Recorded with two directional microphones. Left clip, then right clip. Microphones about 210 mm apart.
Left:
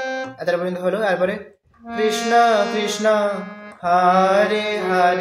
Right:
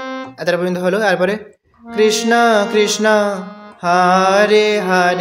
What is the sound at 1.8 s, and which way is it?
Speech, centre (ahead or behind).